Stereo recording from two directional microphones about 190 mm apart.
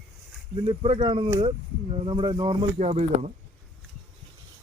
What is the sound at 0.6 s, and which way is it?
Speech, 30° right (ahead or behind).